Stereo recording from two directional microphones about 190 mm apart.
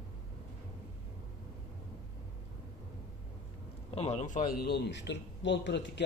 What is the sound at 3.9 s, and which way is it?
A man's voice, 35° left (ahead or behind).